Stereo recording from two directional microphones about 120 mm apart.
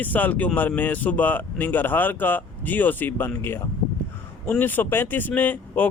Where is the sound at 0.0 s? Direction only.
15° left (ahead or behind).